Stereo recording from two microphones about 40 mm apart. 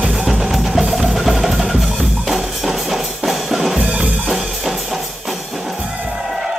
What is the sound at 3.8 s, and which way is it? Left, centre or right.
Music, right.